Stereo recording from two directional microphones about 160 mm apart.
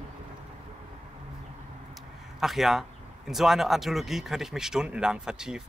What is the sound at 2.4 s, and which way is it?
Speech, centre (ahead or behind).